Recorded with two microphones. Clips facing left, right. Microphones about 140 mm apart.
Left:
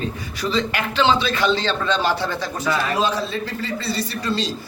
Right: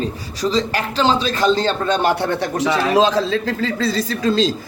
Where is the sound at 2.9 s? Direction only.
90° right.